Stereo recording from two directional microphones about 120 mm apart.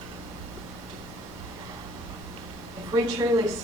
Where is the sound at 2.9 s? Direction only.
30° right (ahead or behind).